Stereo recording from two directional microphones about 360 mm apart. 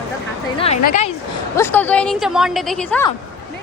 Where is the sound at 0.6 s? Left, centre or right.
Centre.